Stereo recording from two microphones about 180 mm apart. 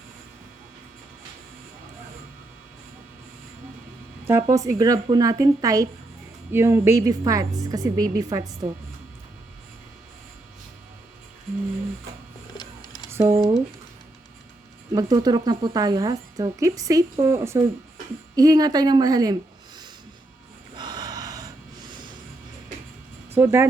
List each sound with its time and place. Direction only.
4.3 s speech: 15° right (ahead or behind)
12.5 s printer: 20° left (ahead or behind)
13.1 s a sound: 15° right (ahead or behind)
14.9 s speech: 20° right (ahead or behind)
20.7 s gasp: 25° right (ahead or behind)
23.3 s speech: 15° right (ahead or behind)